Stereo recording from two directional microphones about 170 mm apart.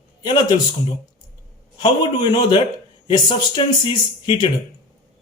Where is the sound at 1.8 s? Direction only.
30° left (ahead or behind).